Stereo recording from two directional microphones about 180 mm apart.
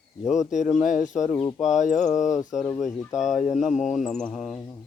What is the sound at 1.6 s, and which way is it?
Speech, 40° left (ahead or behind).